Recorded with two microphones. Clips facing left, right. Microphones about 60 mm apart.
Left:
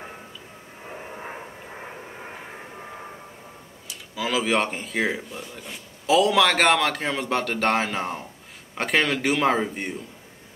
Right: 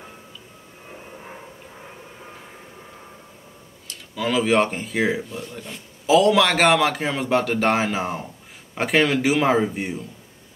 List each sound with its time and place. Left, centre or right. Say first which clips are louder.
1.1 s vehicle: left 3 dB; left
3.8 s speech: right 3 dB; centre